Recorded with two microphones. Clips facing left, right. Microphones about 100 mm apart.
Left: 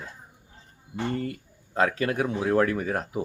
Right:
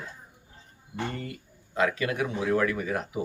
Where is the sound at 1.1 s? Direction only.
35° left (ahead or behind).